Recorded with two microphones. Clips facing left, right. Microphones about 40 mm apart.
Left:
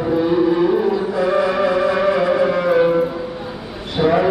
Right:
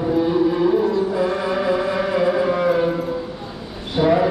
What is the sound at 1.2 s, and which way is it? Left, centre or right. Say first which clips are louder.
Music: left 4 dB; left.